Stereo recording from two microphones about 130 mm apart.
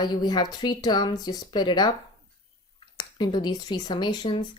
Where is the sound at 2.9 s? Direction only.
35° left (ahead or behind).